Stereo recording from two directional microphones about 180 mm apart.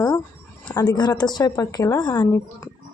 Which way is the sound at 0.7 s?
25° left (ahead or behind).